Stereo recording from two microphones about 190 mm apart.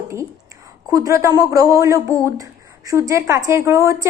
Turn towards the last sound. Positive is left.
turn(degrees=-15)  # may be behind; listen again after turning